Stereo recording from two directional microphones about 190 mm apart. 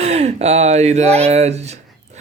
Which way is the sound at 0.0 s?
35° right (ahead or behind).